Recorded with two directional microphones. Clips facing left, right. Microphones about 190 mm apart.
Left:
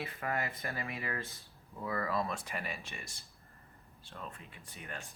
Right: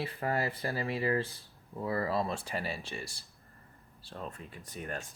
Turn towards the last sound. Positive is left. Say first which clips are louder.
# right 7 dB
turn(degrees=-45)  # may be behind; listen again after turning